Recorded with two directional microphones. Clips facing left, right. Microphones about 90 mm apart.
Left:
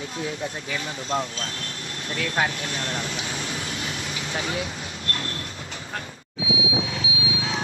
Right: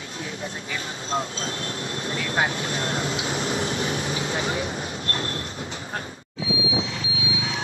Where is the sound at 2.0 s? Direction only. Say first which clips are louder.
Even; 30° right (ahead or behind).